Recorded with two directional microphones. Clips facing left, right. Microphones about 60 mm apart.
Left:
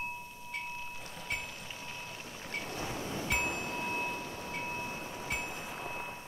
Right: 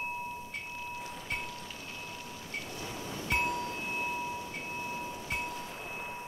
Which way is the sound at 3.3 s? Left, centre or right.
Centre.